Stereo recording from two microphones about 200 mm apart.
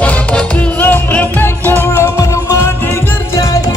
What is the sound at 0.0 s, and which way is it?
Music, 5° left (ahead or behind).